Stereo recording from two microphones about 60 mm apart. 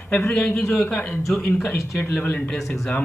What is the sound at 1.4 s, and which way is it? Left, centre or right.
Speech, left.